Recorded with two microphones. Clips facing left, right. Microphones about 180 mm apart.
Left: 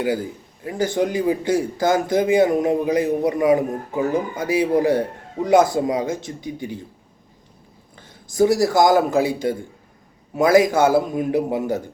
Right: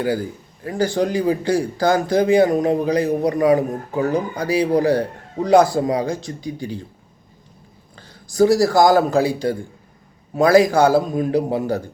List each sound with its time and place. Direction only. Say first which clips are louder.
0.0 s a man's voice: right 1 dB; 20° left (ahead or behind)
8.0 s speech: right 2 dB; 20° left (ahead or behind)